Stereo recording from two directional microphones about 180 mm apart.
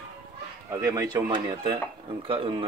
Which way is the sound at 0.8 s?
20° right (ahead or behind).